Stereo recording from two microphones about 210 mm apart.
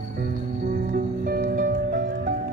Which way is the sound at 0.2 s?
45° right (ahead or behind).